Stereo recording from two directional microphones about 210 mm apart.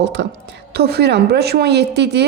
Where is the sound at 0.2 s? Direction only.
55° right (ahead or behind).